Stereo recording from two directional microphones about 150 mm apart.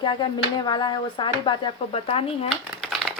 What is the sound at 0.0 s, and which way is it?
Speech, 30° left (ahead or behind).